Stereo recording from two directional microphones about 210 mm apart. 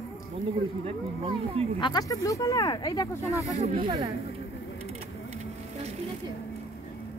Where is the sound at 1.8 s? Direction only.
20° left (ahead or behind).